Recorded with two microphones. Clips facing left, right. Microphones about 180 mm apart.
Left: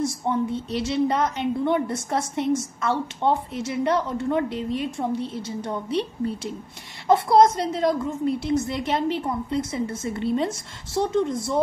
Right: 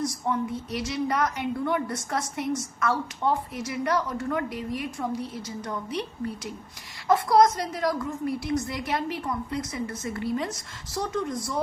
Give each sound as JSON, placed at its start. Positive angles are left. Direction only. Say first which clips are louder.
{"t": 0.0, "sound": "a woman's voice", "louder": "left 4 dB", "side_deg": 25}